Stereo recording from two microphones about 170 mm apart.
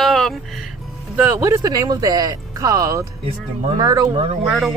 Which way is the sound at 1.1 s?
10° right (ahead or behind).